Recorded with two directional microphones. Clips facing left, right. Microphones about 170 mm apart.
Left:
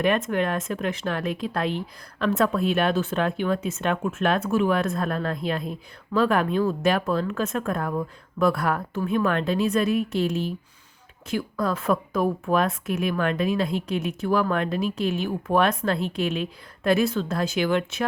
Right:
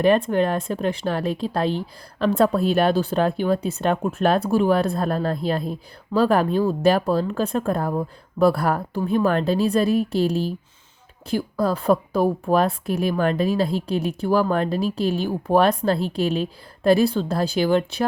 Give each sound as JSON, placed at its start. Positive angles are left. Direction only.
{"t": 0.0, "sound": "speech", "side_deg": -30}